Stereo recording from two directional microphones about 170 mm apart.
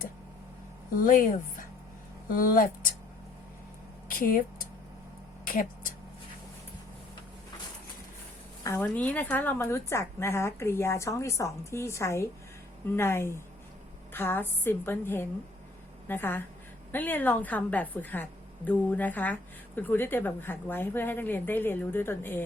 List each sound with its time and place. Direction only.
0.9 s speech: 55° left (ahead or behind)
4.1 s speech: 55° left (ahead or behind)
5.5 s a sound: 55° left (ahead or behind)
8.6 s a woman's voice: 10° left (ahead or behind)